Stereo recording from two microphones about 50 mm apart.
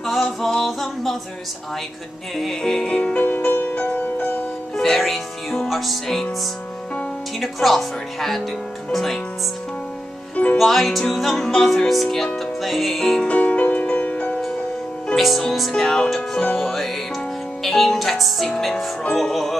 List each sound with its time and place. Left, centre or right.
0.0 s music: centre
2.3 s music: centre
3.5 s music: left
4.7 s speech: centre
7.3 s speech: centre
10.3 s music: left
10.6 s speech: centre
13.2 s music: left
15.1 s music: centre
15.7 s music: centre
16.2 s speech: left
16.5 s speech: centre